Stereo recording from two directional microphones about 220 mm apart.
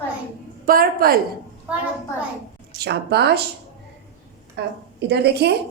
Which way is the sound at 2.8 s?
50° right (ahead or behind).